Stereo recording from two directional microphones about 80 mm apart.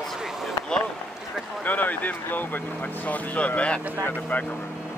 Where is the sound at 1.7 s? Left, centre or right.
Left.